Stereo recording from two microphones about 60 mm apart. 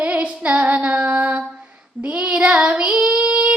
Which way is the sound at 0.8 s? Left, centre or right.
Right.